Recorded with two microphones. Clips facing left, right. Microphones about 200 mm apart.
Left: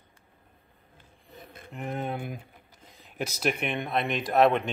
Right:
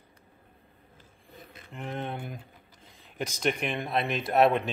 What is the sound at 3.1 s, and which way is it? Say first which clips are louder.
Speech: even; 5° left (ahead or behind).